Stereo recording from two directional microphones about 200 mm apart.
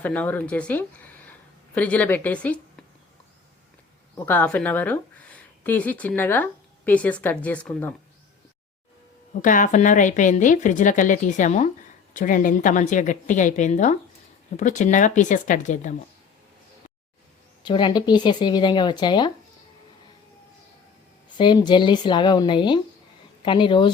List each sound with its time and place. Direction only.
0.0 s a woman's voice: 10° left (ahead or behind)
4.3 s a woman's voice: 10° left (ahead or behind)
9.4 s a woman's voice: 40° left (ahead or behind)
17.6 s speech: 25° left (ahead or behind)
21.3 s speech: 20° left (ahead or behind)